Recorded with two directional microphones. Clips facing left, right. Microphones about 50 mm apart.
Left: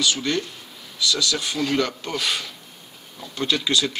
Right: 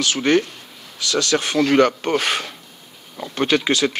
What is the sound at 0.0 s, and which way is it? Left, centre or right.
Speech, right.